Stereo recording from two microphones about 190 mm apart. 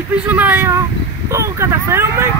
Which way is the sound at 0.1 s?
10° right (ahead or behind).